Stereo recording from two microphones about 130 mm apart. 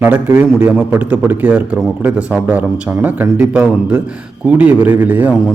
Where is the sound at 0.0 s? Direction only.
15° right (ahead or behind).